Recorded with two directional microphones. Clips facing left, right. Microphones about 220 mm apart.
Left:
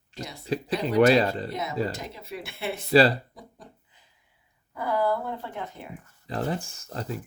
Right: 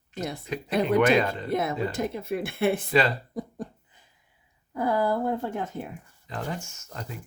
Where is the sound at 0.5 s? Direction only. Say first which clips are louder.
Right 2 dB; 35° left (ahead or behind).